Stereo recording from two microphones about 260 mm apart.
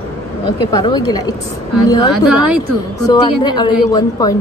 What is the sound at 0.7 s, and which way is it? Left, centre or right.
Speech, centre.